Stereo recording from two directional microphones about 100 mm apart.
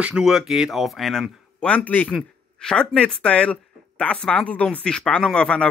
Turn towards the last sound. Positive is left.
turn(degrees=10)  # may be behind; listen again after turning